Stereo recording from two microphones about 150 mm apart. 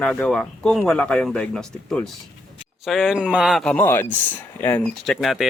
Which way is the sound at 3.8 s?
15° left (ahead or behind).